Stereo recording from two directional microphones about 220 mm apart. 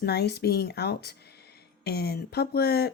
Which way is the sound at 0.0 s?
50° left (ahead or behind).